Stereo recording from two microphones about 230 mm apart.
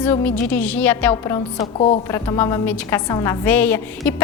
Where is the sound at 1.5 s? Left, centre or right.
Left.